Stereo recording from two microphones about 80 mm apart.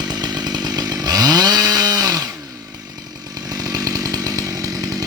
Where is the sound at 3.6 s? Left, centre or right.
Right.